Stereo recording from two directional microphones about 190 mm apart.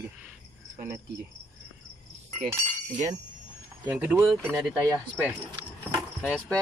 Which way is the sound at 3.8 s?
10° right (ahead or behind).